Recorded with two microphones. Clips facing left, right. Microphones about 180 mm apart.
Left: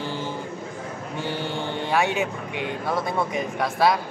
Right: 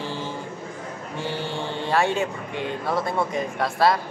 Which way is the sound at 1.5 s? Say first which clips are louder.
Right 1 dB; centre (ahead or behind).